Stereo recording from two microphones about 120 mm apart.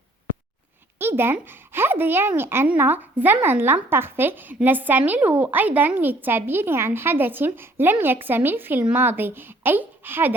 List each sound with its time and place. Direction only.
0.9 s speech: 20° right (ahead or behind)